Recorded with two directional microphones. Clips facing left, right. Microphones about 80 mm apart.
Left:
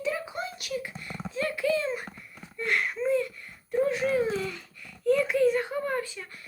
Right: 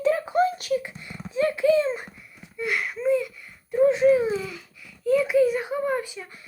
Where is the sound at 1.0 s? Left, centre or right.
Centre.